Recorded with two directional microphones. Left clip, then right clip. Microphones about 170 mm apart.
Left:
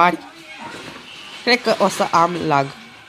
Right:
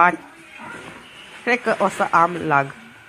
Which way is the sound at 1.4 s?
20° left (ahead or behind).